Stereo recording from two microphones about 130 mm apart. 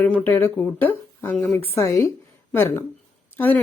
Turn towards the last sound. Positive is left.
turn(degrees=15)  # may be behind; listen again after turning